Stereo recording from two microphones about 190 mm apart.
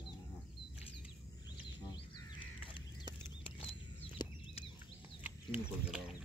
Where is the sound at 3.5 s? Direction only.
30° left (ahead or behind).